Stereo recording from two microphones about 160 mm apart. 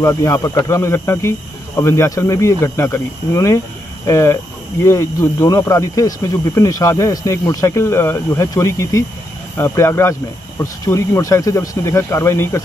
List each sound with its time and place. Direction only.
0.0 s speech: 20° left (ahead or behind)